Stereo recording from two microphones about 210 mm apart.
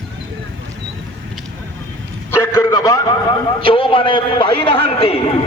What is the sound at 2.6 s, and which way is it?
A man's voice, 15° left (ahead or behind).